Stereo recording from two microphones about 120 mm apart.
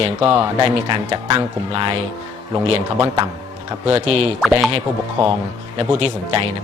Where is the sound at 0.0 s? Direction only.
45° right (ahead or behind).